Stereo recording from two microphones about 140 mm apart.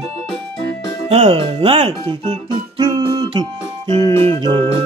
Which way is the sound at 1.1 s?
45° right (ahead or behind).